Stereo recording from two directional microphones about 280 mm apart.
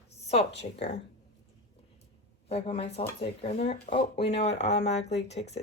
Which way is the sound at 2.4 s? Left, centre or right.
Left.